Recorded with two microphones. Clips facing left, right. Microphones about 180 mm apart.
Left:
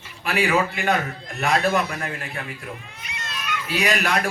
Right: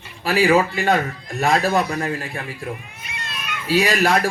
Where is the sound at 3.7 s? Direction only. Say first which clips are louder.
Right 6 dB; 30° right (ahead or behind).